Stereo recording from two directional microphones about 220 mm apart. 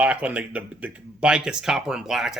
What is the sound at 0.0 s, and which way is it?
Speech, 5° right (ahead or behind).